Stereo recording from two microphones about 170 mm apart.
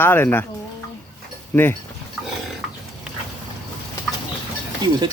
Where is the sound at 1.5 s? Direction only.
10° left (ahead or behind).